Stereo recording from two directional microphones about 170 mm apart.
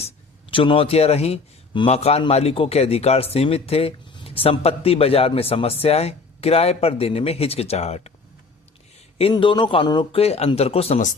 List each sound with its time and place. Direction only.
0.5 s a man's voice: 30° left (ahead or behind)
9.1 s a man's voice: 30° left (ahead or behind)